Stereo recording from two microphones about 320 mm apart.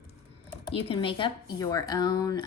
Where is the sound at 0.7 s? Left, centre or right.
Centre.